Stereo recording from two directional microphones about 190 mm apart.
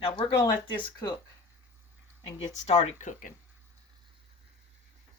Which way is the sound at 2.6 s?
35° left (ahead or behind).